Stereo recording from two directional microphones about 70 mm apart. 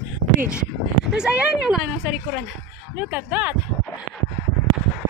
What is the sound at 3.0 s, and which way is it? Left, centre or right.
Speech, right.